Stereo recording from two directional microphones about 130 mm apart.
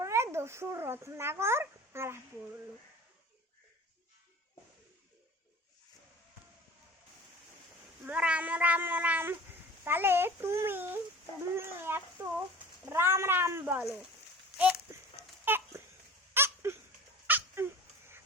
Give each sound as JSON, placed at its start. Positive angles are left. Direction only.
{"t": 0.0, "sound": "a child's voice", "side_deg": -20}
{"t": 8.0, "sound": "speech", "side_deg": -10}
{"t": 14.6, "sound": "a sound", "side_deg": -10}
{"t": 17.2, "sound": "cat", "side_deg": -15}